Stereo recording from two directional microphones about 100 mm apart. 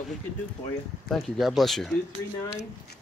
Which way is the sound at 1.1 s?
Centre (ahead or behind).